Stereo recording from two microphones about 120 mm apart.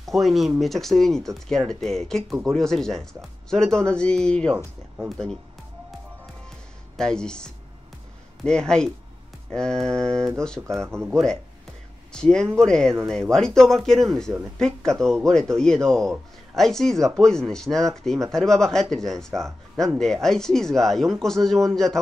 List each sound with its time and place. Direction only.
0.0 s speech: centre (ahead or behind)
7.0 s speech: 5° left (ahead or behind)